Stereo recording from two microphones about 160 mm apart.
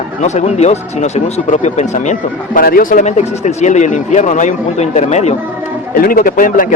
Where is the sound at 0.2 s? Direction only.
45° left (ahead or behind).